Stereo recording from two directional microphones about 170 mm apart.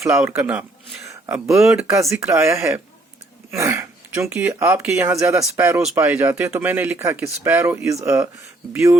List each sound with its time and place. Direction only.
0.3 s speech: 10° right (ahead or behind)
1.6 s speech: 5° right (ahead or behind)
1.9 s speech: 15° right (ahead or behind)